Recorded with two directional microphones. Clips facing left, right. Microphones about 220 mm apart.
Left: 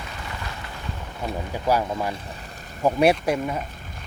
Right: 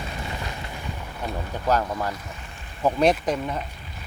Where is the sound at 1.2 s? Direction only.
10° left (ahead or behind).